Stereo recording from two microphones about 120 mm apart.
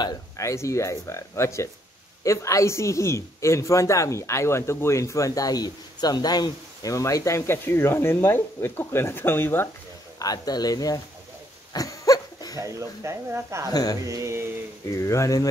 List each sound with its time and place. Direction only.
0.4 s a woman's voice: 25° left (ahead or behind)
10.1 s speech: 30° left (ahead or behind)
11.7 s goat: 30° left (ahead or behind)
12.5 s speech: 25° right (ahead or behind)
13.7 s speech: 30° left (ahead or behind)
14.0 s speech: 25° right (ahead or behind)
15.0 s a woman's voice: 25° left (ahead or behind)